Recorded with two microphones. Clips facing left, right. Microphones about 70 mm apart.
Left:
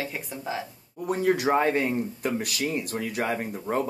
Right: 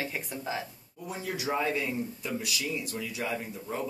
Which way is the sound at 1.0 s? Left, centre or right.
Left.